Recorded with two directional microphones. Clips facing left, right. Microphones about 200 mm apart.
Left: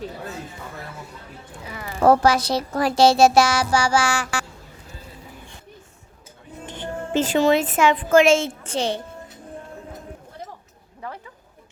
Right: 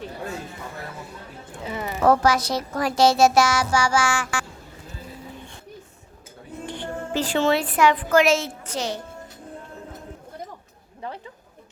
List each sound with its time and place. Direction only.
1.6 s a sound: 25° right (ahead or behind)
2.0 s a child's voice: 30° left (ahead or behind)
7.1 s a woman's voice: 20° left (ahead or behind)